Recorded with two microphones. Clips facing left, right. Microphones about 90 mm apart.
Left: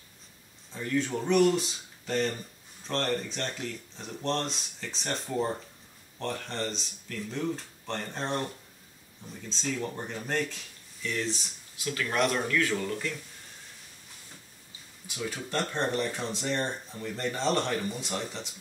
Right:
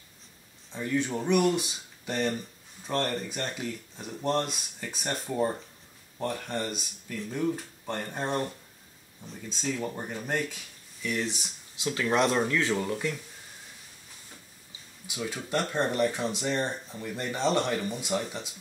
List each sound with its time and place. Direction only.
0.7 s speech: 15° right (ahead or behind)
9.5 s speech: 10° right (ahead or behind)
15.0 s speech: 15° right (ahead or behind)